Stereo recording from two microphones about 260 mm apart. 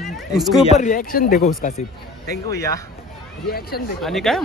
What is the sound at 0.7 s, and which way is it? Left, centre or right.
Speech, left.